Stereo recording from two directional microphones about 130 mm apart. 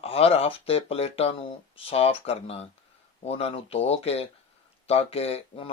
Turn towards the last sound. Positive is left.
turn(degrees=50)  # may be behind; listen again after turning